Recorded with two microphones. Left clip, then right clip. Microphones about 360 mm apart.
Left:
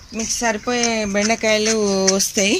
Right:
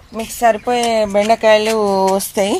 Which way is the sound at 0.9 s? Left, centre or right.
Right.